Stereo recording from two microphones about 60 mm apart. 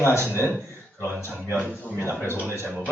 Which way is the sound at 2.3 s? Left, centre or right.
Right.